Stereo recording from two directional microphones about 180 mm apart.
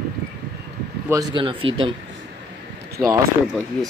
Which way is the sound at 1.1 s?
25° right (ahead or behind).